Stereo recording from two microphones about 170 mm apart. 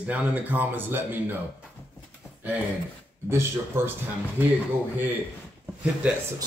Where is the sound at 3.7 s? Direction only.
15° right (ahead or behind).